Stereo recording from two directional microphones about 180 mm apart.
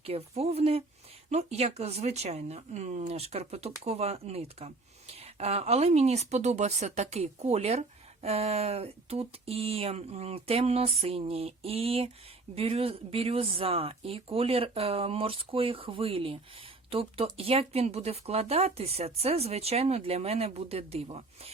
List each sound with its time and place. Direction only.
0.0 s speech: 35° right (ahead or behind)